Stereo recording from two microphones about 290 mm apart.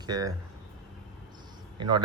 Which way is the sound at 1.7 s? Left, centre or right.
Centre.